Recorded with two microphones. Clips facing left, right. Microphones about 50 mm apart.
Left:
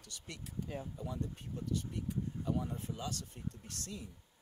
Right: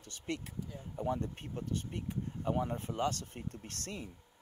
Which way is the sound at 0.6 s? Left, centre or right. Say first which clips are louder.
Left 3 dB; left.